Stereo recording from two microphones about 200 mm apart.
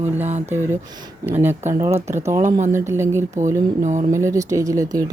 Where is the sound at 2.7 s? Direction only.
15° right (ahead or behind).